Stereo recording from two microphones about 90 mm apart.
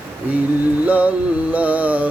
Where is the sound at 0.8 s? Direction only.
15° right (ahead or behind).